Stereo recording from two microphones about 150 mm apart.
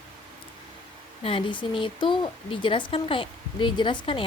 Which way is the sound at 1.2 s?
35° left (ahead or behind).